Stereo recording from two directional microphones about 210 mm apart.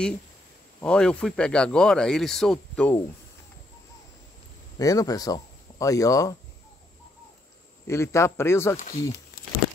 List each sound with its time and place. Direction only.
0.7 s speech: 5° left (ahead or behind)
4.7 s speech: 15° left (ahead or behind)
7.8 s a man's voice: 15° left (ahead or behind)
8.7 s speech: 45° left (ahead or behind)